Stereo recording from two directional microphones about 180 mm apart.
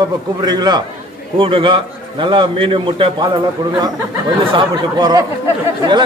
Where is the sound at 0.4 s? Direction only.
20° right (ahead or behind).